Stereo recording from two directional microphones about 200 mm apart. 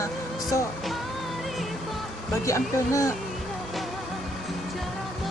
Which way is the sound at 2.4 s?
15° left (ahead or behind).